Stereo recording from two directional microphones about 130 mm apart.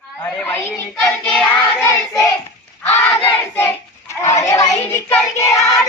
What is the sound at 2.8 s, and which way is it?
Battle cry, 15° left (ahead or behind).